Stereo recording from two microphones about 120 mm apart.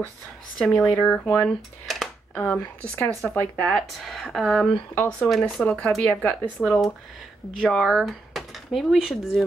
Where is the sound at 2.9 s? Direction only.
15° left (ahead or behind).